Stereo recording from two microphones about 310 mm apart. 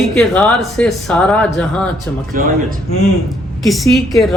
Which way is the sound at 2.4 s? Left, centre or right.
Right.